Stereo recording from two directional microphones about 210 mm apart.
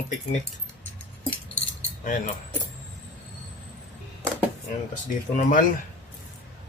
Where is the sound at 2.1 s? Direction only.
40° left (ahead or behind).